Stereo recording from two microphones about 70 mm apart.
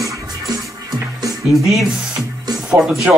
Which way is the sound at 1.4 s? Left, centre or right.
Centre.